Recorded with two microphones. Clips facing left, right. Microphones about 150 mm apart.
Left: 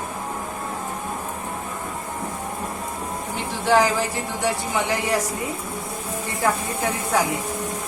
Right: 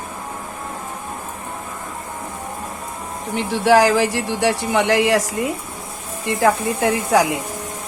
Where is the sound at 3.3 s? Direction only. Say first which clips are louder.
Right 5 dB; 90° right.